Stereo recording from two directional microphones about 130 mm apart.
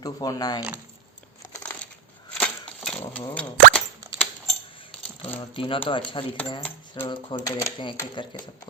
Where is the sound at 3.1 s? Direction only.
10° left (ahead or behind).